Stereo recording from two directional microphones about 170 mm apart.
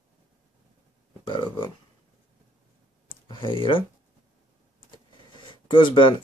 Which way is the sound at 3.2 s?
30° left (ahead or behind).